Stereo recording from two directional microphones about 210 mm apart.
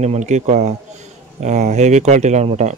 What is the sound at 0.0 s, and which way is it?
Speech, 35° right (ahead or behind).